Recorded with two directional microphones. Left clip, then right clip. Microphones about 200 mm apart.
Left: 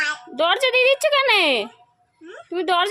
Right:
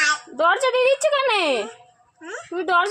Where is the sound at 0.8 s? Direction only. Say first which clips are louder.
Left 1 dB; 50° left (ahead or behind).